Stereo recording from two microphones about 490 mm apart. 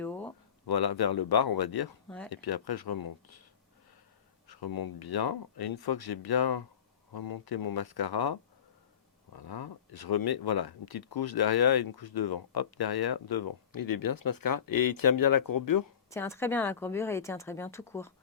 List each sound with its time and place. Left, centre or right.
0.0 s a sound: centre
0.7 s speech: left
2.0 s speech: centre
2.3 s speech: left
4.4 s speech: left
16.0 s speech: centre